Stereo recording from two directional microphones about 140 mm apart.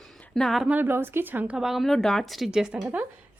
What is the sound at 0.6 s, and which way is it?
Speech, 15° right (ahead or behind).